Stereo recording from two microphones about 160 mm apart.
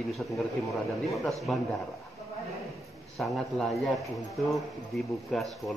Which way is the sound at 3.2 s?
Centre (ahead or behind).